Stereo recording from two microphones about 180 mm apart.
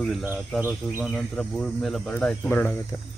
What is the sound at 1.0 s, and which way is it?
Speech, centre (ahead or behind).